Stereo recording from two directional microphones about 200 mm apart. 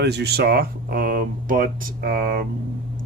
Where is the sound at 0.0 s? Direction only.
55° right (ahead or behind).